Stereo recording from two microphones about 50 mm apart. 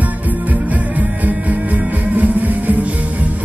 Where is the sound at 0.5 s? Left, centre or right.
Right.